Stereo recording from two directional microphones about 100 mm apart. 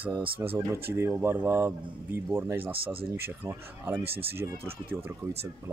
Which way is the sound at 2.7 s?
65° right (ahead or behind).